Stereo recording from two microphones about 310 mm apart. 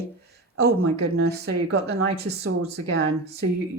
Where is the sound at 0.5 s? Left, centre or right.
Right.